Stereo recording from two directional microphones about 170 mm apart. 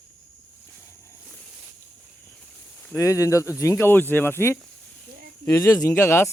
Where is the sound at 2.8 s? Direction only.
15° left (ahead or behind).